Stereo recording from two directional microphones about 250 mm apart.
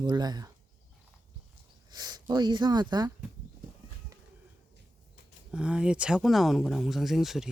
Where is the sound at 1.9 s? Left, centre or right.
Centre.